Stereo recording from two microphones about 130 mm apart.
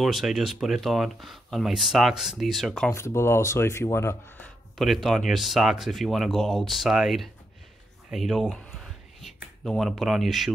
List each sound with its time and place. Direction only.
0.0 s speech: centre (ahead or behind)
2.9 s speech: 20° left (ahead or behind)
4.7 s speech: centre (ahead or behind)
8.7 s a sound: centre (ahead or behind)